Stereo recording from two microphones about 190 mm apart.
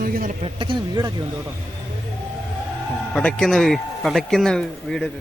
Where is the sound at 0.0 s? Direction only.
50° right (ahead or behind).